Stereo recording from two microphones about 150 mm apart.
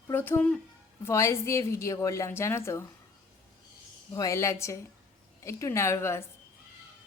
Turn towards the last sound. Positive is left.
turn(degrees=15)  # may be behind; listen again after turning